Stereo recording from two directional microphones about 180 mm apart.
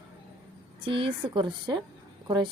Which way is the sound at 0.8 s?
30° right (ahead or behind).